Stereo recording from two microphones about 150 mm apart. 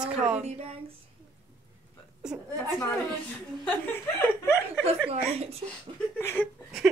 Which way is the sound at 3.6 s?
15° left (ahead or behind).